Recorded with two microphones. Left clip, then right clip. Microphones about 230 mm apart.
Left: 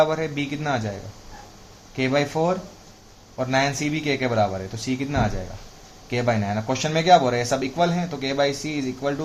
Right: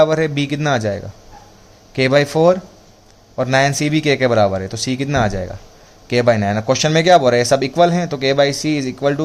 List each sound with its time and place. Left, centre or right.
0.0 s speech: right
2.0 s speech: right